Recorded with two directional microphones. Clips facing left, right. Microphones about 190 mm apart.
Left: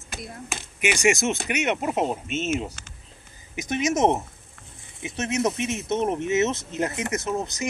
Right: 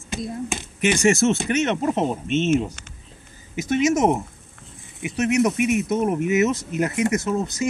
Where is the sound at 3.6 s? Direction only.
20° left (ahead or behind).